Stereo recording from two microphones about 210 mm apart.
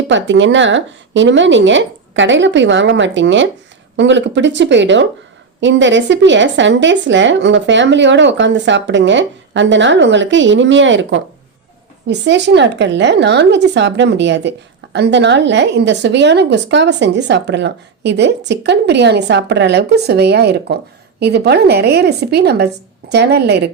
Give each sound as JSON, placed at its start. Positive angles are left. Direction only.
{"t": 0.1, "sound": "a woman's voice", "side_deg": -60}